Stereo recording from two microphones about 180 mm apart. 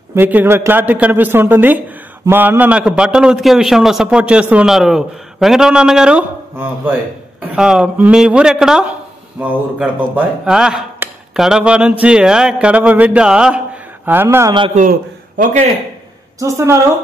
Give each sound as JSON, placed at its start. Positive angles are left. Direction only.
{"t": 0.1, "sound": "a man's voice", "side_deg": -10}
{"t": 14.8, "sound": "a man's voice", "side_deg": -50}
{"t": 16.3, "sound": "a man's voice", "side_deg": -15}